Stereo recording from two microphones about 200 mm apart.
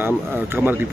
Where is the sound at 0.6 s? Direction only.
Centre (ahead or behind).